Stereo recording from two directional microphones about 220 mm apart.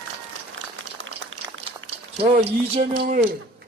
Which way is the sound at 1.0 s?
60° right (ahead or behind).